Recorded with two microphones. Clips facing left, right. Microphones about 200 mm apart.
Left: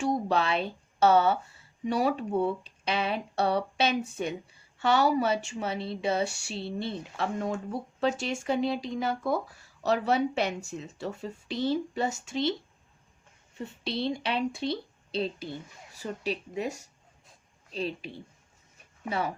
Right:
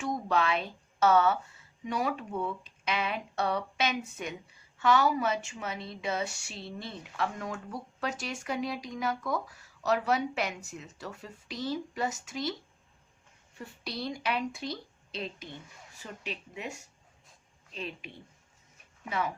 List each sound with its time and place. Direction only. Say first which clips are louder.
0.0 s a woman's voice: left 3 dB; 30° left (ahead or behind)
13.6 s a woman's voice: left 6 dB; 25° left (ahead or behind)